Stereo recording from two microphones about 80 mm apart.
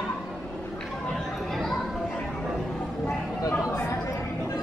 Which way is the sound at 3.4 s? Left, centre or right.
Left.